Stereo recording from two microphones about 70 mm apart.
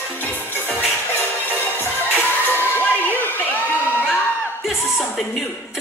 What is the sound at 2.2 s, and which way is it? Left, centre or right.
Crowd, left.